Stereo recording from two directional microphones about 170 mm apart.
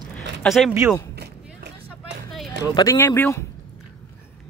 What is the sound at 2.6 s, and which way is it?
Speech, 20° left (ahead or behind).